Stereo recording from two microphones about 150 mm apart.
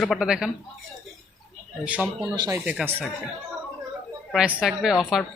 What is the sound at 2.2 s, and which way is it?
Speech, 25° right (ahead or behind).